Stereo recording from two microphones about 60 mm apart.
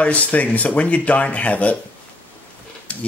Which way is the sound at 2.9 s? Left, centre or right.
Left.